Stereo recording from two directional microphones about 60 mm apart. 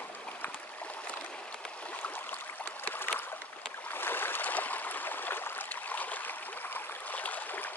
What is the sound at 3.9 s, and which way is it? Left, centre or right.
Stream, left.